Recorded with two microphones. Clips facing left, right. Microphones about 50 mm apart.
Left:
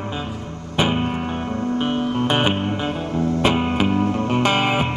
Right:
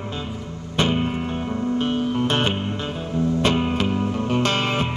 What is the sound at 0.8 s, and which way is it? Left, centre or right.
Music, centre.